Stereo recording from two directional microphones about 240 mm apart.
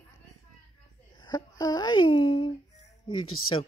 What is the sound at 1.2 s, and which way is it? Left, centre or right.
Speech, centre.